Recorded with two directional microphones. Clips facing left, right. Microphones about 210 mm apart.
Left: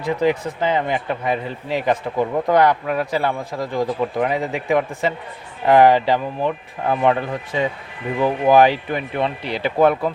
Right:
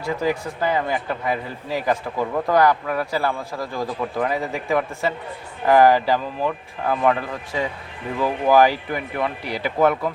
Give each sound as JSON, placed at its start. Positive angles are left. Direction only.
{"t": 0.0, "sound": "speech", "side_deg": 20}